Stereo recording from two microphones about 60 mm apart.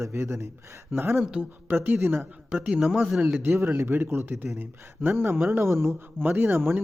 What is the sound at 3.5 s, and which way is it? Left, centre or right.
Speech, right.